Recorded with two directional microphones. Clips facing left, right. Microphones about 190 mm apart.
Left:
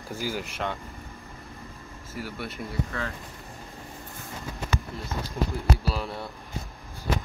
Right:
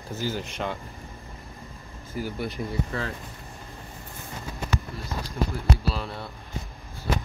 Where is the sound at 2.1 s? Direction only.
Centre (ahead or behind).